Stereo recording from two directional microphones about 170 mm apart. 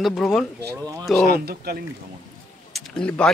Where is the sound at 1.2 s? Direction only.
65° right (ahead or behind).